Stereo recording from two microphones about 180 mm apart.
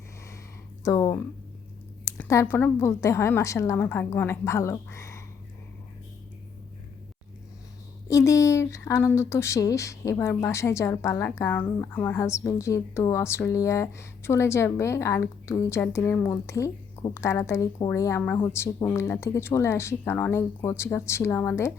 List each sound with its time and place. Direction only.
0.9 s speech: 20° left (ahead or behind)
8.0 s speech: 15° left (ahead or behind)